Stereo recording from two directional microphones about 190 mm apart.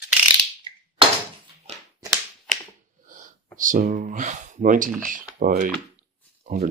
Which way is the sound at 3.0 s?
40° right (ahead or behind).